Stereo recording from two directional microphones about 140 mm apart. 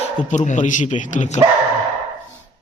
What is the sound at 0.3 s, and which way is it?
Speech, 60° left (ahead or behind).